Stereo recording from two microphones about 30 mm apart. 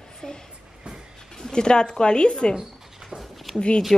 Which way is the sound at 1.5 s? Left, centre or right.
Left.